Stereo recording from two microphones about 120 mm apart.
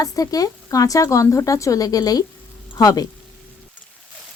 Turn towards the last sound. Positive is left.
turn(degrees=30)  # may be behind; listen again after turning